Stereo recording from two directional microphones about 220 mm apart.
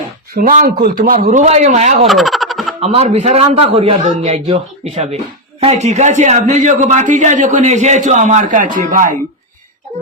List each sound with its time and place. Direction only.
0.3 s a man's voice: 35° right (ahead or behind)
2.0 s a sound: centre (ahead or behind)
2.8 s a man's voice: 30° right (ahead or behind)